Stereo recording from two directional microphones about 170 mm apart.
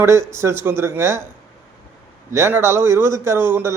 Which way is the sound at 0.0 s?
15° right (ahead or behind).